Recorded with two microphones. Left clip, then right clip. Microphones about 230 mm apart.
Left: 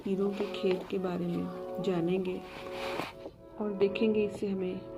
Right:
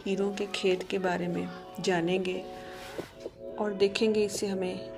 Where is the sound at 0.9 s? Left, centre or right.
Right.